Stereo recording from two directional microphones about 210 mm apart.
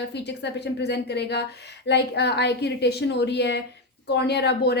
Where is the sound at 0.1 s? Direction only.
55° left (ahead or behind).